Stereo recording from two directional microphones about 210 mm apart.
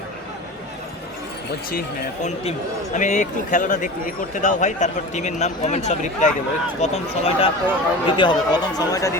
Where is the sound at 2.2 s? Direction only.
30° left (ahead or behind).